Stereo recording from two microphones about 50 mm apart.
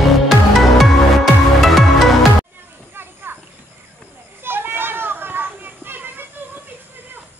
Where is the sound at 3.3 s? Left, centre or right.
Right.